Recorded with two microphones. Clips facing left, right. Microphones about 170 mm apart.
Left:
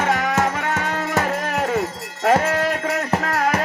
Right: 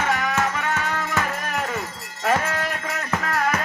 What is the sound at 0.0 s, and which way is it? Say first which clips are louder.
Music: left 3 dB; 75° left (ahead or behind).